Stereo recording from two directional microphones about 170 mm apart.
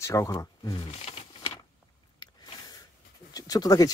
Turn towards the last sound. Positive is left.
turn(degrees=20)  # may be behind; listen again after turning